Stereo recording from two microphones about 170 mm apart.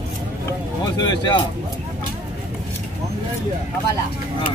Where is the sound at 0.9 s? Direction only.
25° left (ahead or behind).